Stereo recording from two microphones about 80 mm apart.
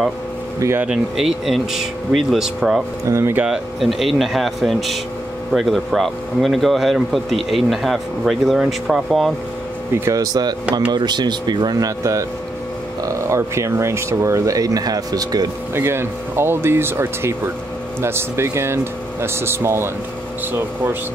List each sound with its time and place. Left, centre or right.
0.8 s speech: centre
3.1 s speech: right
3.4 s speech: centre
10.0 s speech: right
10.9 s speech: right
12.0 s speech: right
15.7 s speech: right